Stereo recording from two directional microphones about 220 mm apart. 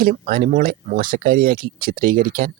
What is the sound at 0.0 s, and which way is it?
Speech, 40° right (ahead or behind).